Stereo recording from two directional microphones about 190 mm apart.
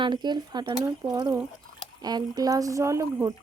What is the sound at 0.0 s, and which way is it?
A woman's voice, 25° right (ahead or behind).